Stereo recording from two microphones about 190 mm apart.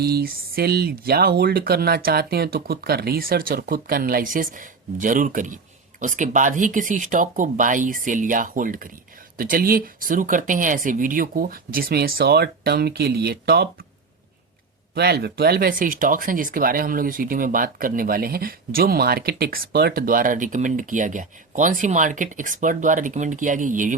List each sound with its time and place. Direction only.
0.0 s speech: 55° right (ahead or behind)
14.9 s speech: 60° right (ahead or behind); by 23.9 s 40° right (ahead or behind)